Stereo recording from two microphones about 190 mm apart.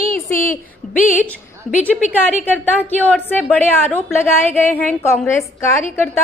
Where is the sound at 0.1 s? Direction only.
45° left (ahead or behind).